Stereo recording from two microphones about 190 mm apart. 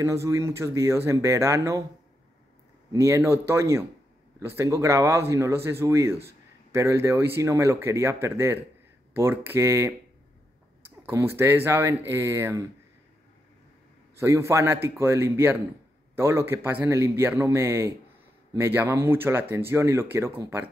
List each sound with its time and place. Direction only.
0.0 s speech: 15° right (ahead or behind)
2.9 s speech: 15° right (ahead or behind)
11.1 s speech: 15° right (ahead or behind)
14.2 s speech: 15° right (ahead or behind)